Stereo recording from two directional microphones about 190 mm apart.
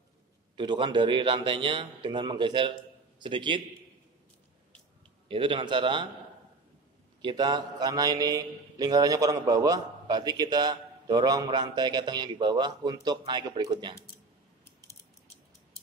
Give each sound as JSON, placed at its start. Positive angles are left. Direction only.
{"t": 0.6, "sound": "a man's voice", "side_deg": -25}
{"t": 5.3, "sound": "a man's voice", "side_deg": -25}
{"t": 7.2, "sound": "a man's voice", "side_deg": -25}